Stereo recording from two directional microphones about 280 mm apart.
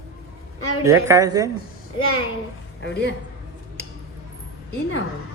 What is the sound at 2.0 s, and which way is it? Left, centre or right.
Speech, left.